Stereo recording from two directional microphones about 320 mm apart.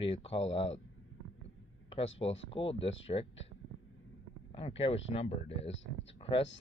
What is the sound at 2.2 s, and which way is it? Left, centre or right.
Speech, centre.